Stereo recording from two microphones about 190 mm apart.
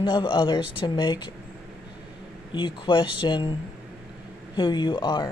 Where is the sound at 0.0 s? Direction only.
25° left (ahead or behind).